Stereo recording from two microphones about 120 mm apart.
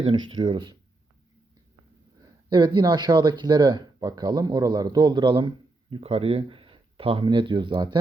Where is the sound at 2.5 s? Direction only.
40° right (ahead or behind).